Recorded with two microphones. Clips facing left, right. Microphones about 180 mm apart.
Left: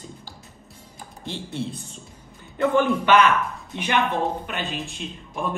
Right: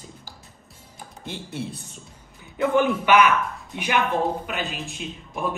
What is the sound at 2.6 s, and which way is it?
A man's voice, 10° right (ahead or behind).